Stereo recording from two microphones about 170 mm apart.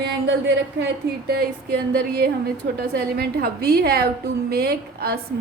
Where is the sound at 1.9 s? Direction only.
70° right (ahead or behind).